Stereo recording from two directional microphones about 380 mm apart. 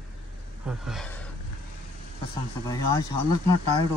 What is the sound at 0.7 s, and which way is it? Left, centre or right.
Speech, centre.